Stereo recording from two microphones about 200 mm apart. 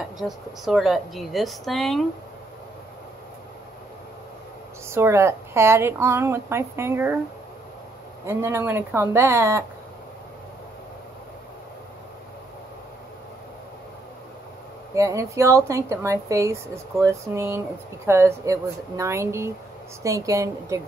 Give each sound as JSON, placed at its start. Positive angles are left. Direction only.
{"t": 0.2, "sound": "a woman's voice", "side_deg": 0}
{"t": 4.8, "sound": "speech", "side_deg": -15}
{"t": 8.3, "sound": "speech", "side_deg": -15}
{"t": 15.0, "sound": "speech", "side_deg": -15}